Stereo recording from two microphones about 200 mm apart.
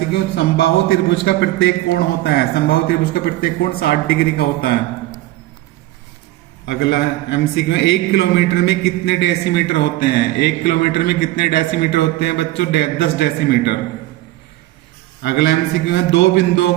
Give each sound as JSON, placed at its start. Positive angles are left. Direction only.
{"t": 0.3, "sound": "a man's voice", "side_deg": 60}
{"t": 6.7, "sound": "a man's voice", "side_deg": 55}
{"t": 15.2, "sound": "a man's voice", "side_deg": 55}